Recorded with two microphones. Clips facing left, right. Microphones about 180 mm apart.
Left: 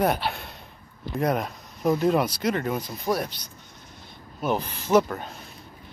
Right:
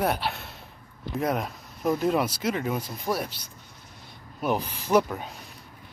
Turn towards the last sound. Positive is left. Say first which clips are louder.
# left 2 dB
turn(degrees=-10)  # may be behind; listen again after turning